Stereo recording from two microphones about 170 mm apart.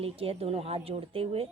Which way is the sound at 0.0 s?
35° right (ahead or behind).